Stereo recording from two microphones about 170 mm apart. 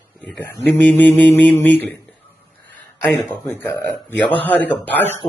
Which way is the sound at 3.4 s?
15° left (ahead or behind).